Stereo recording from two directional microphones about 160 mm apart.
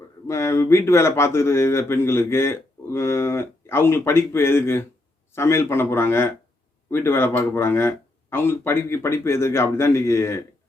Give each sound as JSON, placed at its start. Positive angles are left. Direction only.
{"t": 0.3, "sound": "speech", "side_deg": 15}